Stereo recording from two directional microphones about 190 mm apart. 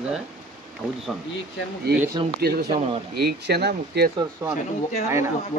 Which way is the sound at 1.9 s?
55° right (ahead or behind).